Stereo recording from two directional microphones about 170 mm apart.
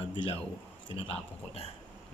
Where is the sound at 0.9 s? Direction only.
35° left (ahead or behind).